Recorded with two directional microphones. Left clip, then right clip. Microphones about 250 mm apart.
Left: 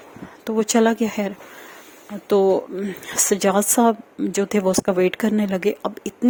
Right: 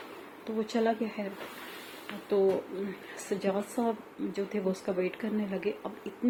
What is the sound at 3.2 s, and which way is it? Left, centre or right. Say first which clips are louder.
Speech: left 12 dB; left.